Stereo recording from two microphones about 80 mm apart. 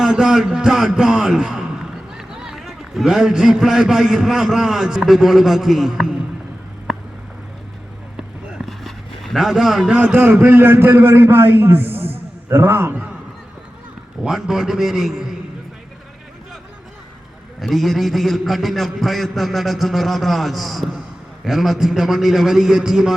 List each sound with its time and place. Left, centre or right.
0.0 s speech: centre
8.1 s a sound: centre
10.0 s a man's voice: centre
14.3 s a man's voice: centre
17.6 s a man's voice: centre